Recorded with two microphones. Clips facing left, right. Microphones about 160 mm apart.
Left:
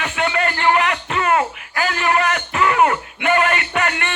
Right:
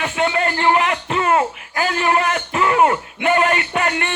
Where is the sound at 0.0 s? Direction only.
30° right (ahead or behind).